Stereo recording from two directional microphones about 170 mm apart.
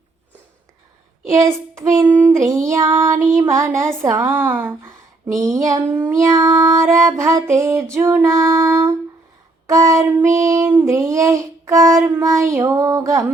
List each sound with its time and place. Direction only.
1.3 s child singing: 20° right (ahead or behind)